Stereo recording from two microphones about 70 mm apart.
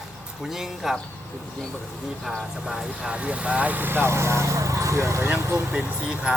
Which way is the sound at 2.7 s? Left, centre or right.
Centre.